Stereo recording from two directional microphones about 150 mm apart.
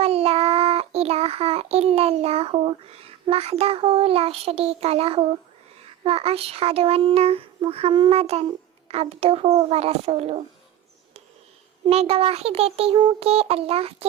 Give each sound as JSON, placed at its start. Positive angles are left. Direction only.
{"t": 0.0, "sound": "child singing", "side_deg": -40}
{"t": 6.0, "sound": "a child's voice", "side_deg": -40}
{"t": 11.9, "sound": "a child's voice", "side_deg": -40}